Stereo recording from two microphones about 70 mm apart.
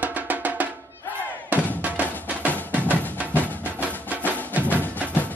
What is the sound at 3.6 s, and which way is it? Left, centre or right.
Music, right.